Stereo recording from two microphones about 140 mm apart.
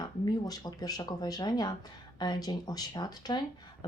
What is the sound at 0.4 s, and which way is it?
Speech, 25° left (ahead or behind).